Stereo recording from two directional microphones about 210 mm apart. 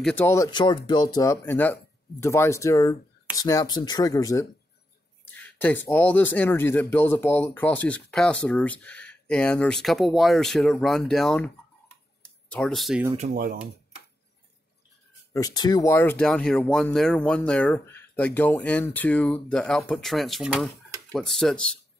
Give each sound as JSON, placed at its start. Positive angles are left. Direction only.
{"t": 0.0, "sound": "speech", "side_deg": 10}
{"t": 12.2, "sound": "a sound", "side_deg": 5}
{"t": 13.3, "sound": "speech", "side_deg": -45}
{"t": 15.3, "sound": "speech", "side_deg": 20}